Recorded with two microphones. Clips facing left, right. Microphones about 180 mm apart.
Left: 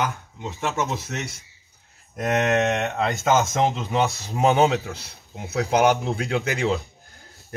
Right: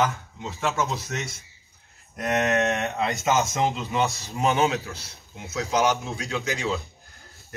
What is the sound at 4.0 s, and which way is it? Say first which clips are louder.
A man's voice: left 3 dB; 60° left (ahead or behind).